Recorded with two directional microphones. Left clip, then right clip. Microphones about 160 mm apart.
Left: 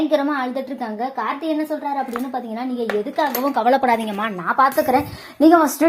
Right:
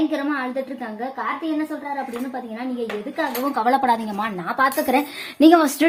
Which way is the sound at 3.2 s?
25° left (ahead or behind).